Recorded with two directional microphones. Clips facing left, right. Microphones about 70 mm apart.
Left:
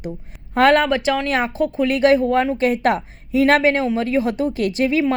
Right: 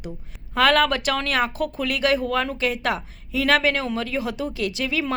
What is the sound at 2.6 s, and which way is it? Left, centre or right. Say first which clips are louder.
A woman's voice: left 6 dB; left.